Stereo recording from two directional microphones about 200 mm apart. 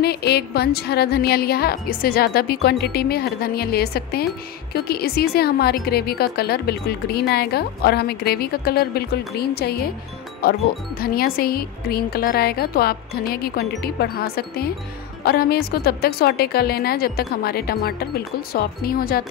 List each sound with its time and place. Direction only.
0.0 s a woman's voice: 55° left (ahead or behind)